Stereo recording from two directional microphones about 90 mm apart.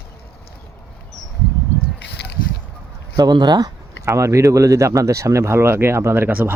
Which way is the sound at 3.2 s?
50° right (ahead or behind).